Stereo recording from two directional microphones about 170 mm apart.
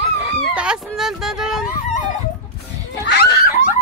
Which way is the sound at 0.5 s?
5° right (ahead or behind).